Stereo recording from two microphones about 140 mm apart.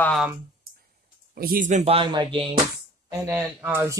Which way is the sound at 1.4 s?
85° right.